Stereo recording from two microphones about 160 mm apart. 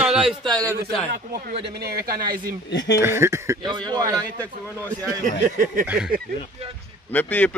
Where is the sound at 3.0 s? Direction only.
15° right (ahead or behind).